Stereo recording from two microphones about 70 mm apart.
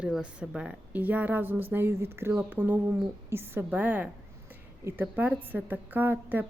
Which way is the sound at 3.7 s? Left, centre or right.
Right.